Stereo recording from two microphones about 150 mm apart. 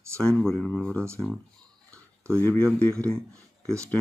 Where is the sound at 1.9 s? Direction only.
15° right (ahead or behind).